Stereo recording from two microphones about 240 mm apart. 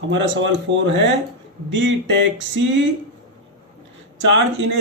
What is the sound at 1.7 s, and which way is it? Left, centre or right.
Speech, right.